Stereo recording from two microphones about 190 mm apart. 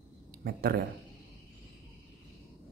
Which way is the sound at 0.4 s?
55° right (ahead or behind).